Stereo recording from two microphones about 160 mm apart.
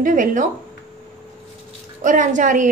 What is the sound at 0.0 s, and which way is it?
Speech, 55° right (ahead or behind).